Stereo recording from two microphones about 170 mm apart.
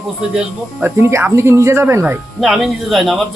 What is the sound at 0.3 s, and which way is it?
Speech, 10° right (ahead or behind).